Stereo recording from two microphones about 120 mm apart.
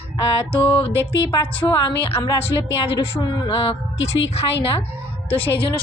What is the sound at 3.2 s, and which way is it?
A woman's voice, 40° left (ahead or behind).